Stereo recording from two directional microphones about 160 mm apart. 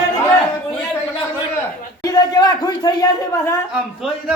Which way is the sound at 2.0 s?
25° left (ahead or behind).